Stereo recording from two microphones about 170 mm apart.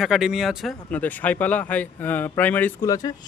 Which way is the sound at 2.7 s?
20° left (ahead or behind).